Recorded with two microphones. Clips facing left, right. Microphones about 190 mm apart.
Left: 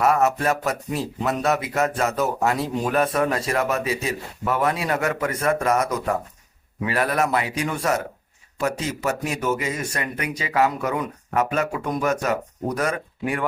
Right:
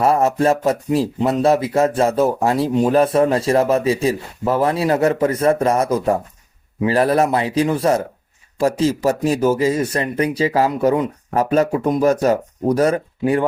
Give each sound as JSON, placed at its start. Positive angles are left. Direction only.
{"t": 0.0, "sound": "speech", "side_deg": -30}